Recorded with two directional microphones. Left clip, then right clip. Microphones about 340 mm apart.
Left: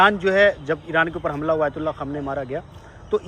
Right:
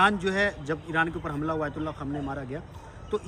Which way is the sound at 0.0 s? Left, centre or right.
Centre.